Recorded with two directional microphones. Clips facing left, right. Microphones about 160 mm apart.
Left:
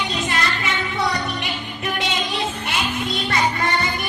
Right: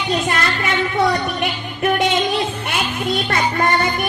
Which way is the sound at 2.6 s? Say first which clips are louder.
Right 2 dB; 50° right (ahead or behind).